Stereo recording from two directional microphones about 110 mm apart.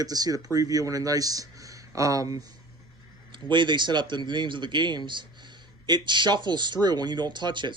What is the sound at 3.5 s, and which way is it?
A man's voice, 45° right (ahead or behind).